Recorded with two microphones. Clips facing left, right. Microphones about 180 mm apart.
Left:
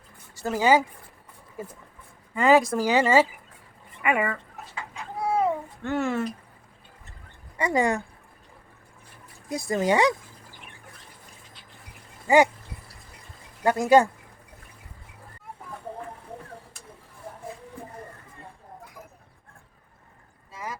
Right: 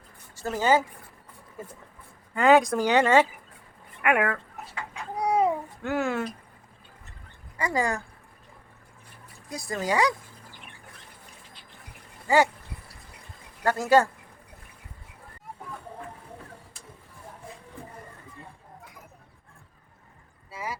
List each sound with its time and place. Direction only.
0.3 s speech: 10° left (ahead or behind)
5.1 s babbling: 20° right (ahead or behind)
5.8 s speech: centre (ahead or behind)
7.6 s speech: 20° left (ahead or behind)
9.5 s speech: 25° left (ahead or behind)
13.7 s speech: 15° left (ahead or behind)
20.5 s a sound: 10° right (ahead or behind)